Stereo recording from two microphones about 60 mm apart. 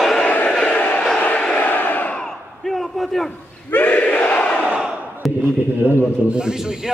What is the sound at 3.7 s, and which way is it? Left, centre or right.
Battle cry, left.